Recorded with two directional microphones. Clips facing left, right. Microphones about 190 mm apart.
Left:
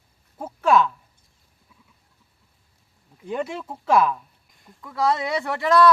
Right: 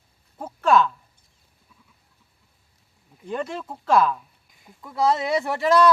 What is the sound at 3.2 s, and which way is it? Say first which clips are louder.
Speech: left 1 dB; 10° left (ahead or behind).